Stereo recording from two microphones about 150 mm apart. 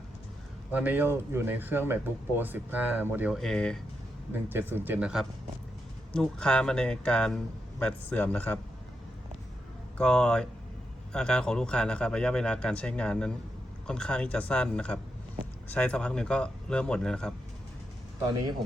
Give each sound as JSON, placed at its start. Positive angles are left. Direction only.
{"t": 0.7, "sound": "speech", "side_deg": -10}
{"t": 3.3, "sound": "speech", "side_deg": 5}
{"t": 4.4, "sound": "speech", "side_deg": -15}
{"t": 6.1, "sound": "speech", "side_deg": 5}
{"t": 10.0, "sound": "speech", "side_deg": 5}